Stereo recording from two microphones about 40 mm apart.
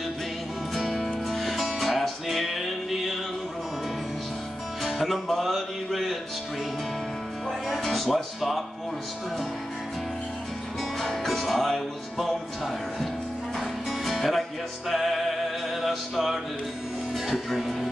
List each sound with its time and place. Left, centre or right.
0.7 s music: centre
4.8 s music: centre
7.8 s music: centre
11.0 s music: centre
13.6 s music: centre